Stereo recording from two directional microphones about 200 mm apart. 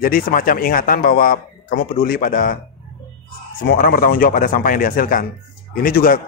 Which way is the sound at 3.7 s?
45° left (ahead or behind).